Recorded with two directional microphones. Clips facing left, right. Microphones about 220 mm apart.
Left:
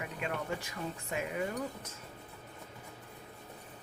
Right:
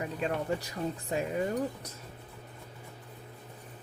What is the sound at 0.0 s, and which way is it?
Speech, 35° right (ahead or behind).